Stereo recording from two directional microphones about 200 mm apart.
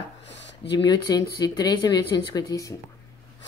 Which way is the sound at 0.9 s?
20° left (ahead or behind).